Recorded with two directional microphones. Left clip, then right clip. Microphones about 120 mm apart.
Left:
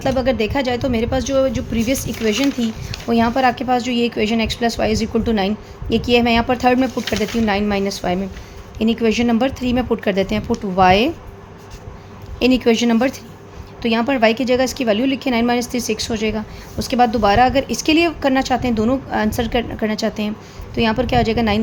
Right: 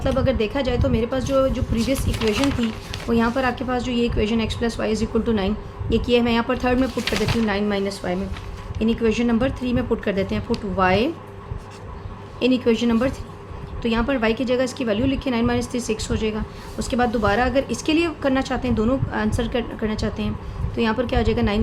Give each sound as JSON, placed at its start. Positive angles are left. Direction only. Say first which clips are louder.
{"t": 0.0, "sound": "a woman's voice", "louder": "left 3 dB", "side_deg": 55}
{"t": 12.4, "sound": "a woman's voice", "louder": "left 4 dB", "side_deg": 60}